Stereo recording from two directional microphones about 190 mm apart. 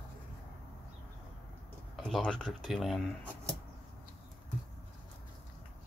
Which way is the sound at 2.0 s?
Centre (ahead or behind).